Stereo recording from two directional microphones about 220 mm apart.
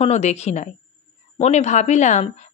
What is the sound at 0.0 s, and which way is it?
A woman's voice, 30° left (ahead or behind).